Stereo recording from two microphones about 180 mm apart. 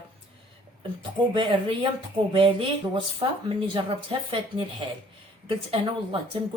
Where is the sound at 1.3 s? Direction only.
25° right (ahead or behind).